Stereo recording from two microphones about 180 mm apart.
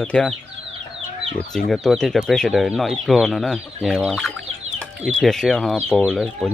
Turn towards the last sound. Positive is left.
turn(degrees=0)  # may be behind; listen again after turning